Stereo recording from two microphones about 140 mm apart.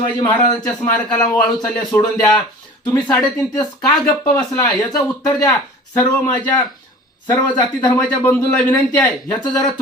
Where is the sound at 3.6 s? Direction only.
25° left (ahead or behind).